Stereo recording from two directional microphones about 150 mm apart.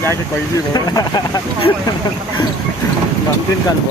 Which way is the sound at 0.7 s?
25° left (ahead or behind).